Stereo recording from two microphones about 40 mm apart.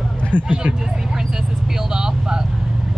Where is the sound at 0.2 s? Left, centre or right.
Left.